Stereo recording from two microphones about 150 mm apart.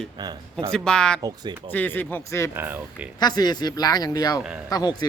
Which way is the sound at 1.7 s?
10° left (ahead or behind).